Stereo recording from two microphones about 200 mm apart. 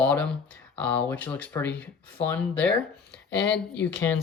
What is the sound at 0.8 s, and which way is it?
Speech, 5° left (ahead or behind).